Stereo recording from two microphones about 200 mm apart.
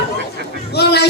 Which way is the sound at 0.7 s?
55° left (ahead or behind).